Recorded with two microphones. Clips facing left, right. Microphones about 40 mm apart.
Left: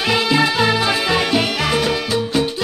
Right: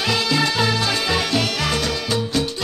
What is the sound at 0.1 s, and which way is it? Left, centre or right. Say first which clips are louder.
Music: left 5 dB; centre.